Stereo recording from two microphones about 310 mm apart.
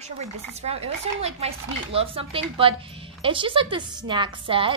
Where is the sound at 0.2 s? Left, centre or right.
Right.